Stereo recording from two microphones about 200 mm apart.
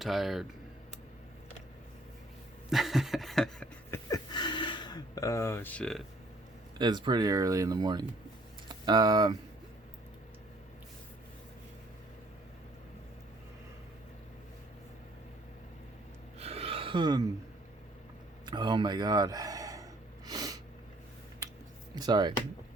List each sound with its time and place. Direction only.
0.0 s speech: centre (ahead or behind)
2.6 s a sound: centre (ahead or behind)
4.1 s a sound: 20° left (ahead or behind); by 6.0 s 5° left (ahead or behind)
6.7 s speech: 20° right (ahead or behind)
16.4 s gasp: 30° right (ahead or behind)
18.4 s gasp: 20° right (ahead or behind)
21.9 s speech: 20° right (ahead or behind)